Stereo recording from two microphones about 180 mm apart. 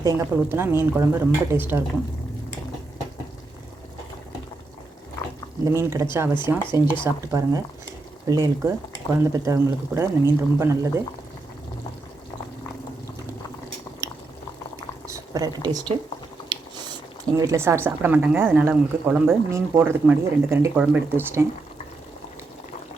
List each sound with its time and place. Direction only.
0.0 s speech: 15° right (ahead or behind)
5.6 s speech: 15° right (ahead or behind)
15.0 s speech: 20° right (ahead or behind)
17.3 s speech: 15° right (ahead or behind)